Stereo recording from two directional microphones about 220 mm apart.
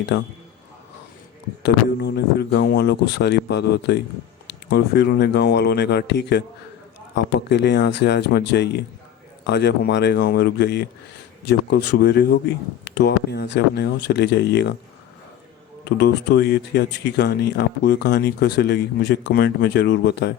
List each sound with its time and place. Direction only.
1.6 s speech: 50° left (ahead or behind)
15.8 s speech: 50° left (ahead or behind)